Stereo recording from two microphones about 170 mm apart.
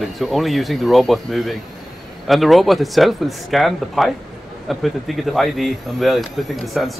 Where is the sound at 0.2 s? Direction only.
Centre (ahead or behind).